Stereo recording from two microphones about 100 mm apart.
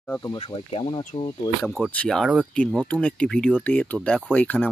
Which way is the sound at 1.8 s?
20° left (ahead or behind).